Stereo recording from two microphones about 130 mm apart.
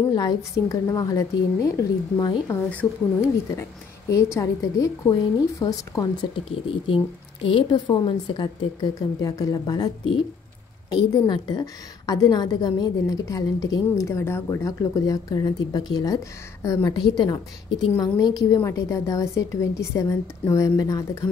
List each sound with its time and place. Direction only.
0.1 s a woman's voice: 30° left (ahead or behind)
2.7 s a woman's voice: 15° left (ahead or behind)
7.4 s a woman's voice: 40° left (ahead or behind)